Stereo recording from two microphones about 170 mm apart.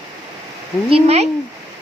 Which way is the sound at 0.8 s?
35° right (ahead or behind).